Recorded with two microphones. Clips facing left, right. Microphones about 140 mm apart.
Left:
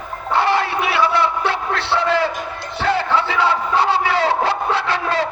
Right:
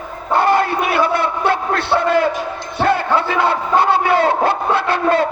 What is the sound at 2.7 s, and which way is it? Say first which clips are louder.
Crowd: right 3 dB; 50° right (ahead or behind).